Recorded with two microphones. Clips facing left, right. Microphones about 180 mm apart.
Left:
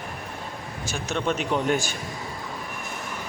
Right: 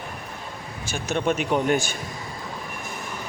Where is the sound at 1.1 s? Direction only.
15° right (ahead or behind).